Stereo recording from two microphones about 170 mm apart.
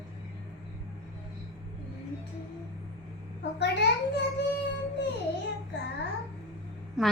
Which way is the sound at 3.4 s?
90° left.